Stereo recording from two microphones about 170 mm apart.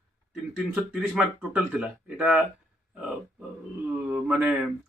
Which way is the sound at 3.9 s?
5° right (ahead or behind).